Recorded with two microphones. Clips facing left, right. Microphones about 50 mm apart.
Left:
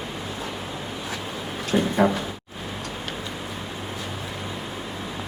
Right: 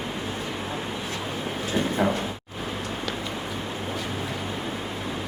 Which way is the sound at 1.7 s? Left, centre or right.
Left.